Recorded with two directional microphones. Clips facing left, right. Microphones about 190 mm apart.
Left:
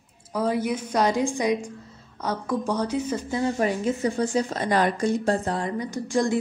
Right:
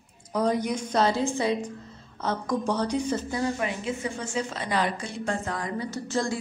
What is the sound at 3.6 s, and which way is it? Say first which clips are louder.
A woman's voice: left 6 dB; 40° left (ahead or behind).